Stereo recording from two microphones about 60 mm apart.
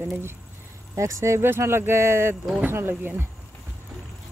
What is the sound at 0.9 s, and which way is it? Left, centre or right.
Speech, right.